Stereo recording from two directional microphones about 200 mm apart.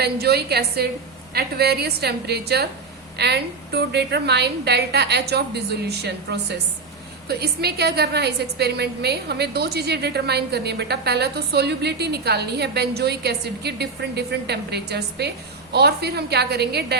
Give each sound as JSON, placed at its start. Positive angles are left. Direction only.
{"t": 0.0, "sound": "a woman's voice", "side_deg": -55}